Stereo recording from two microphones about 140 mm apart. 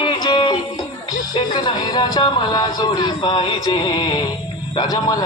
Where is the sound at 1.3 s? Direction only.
30° left (ahead or behind).